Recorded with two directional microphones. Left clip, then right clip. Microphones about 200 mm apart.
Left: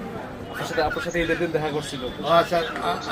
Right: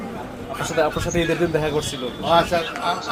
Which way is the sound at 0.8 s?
45° right (ahead or behind).